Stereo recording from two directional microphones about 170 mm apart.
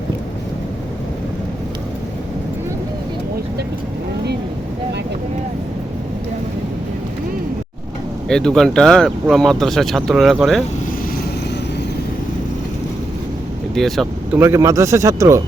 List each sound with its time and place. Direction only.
8.3 s speech: 5° left (ahead or behind)
13.7 s speech: centre (ahead or behind)
14.3 s speech: 15° right (ahead or behind)